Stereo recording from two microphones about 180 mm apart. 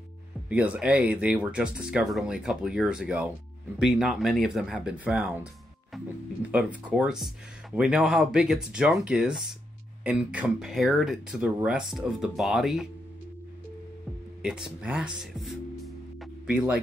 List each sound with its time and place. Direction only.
0.5 s speech: 5° right (ahead or behind)
6.5 s speech: 5° right (ahead or behind)
14.4 s speech: 5° right (ahead or behind)
15.3 s music: centre (ahead or behind)